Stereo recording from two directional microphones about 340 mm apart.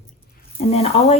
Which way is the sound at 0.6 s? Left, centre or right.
Centre.